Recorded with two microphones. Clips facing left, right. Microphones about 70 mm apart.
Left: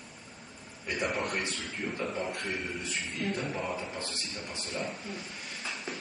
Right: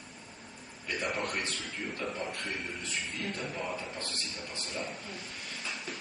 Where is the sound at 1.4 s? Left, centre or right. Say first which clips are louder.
Left 2 dB; centre.